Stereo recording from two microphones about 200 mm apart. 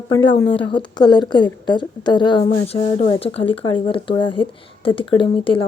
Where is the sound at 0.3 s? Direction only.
25° left (ahead or behind).